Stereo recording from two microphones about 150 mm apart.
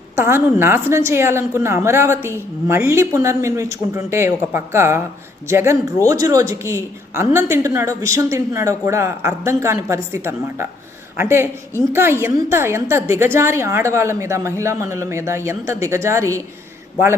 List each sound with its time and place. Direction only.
0.2 s a woman's voice: 15° right (ahead or behind)